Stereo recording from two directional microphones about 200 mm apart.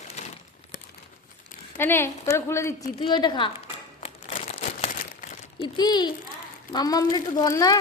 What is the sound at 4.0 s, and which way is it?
Crumpling, 30° left (ahead or behind).